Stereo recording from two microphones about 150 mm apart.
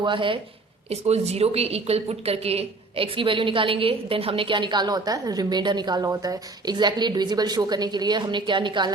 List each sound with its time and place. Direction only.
0.0 s a woman's voice: 35° right (ahead or behind)
0.9 s a woman's voice: 45° right (ahead or behind)